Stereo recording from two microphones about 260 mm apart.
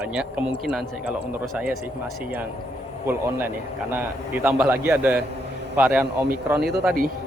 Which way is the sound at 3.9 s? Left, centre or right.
Centre.